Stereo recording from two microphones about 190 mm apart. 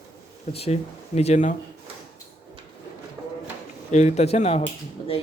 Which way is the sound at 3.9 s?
35° left (ahead or behind).